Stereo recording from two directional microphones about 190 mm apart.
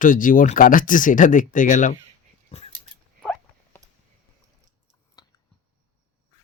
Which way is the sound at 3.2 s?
5° left (ahead or behind).